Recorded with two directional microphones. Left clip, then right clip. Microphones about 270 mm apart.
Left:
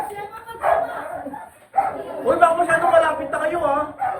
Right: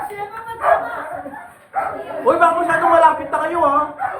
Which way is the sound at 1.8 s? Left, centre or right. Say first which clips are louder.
Left 1 dB; centre.